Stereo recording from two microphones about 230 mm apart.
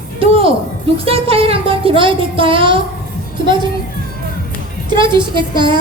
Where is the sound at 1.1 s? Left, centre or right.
Right.